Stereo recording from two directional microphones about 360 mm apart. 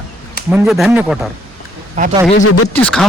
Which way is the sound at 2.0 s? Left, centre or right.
Centre.